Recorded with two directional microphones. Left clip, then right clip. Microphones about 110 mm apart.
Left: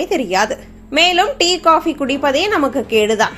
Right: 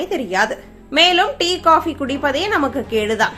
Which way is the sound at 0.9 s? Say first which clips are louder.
Left 1 dB; 25° left (ahead or behind).